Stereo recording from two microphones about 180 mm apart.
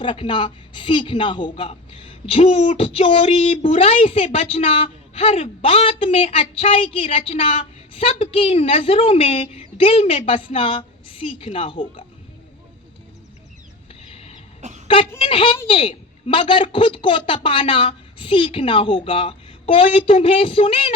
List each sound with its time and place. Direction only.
0.0 s a woman's voice: 30° left (ahead or behind)
14.6 s a sound: 40° right (ahead or behind)
15.2 s a woman's voice: 30° left (ahead or behind)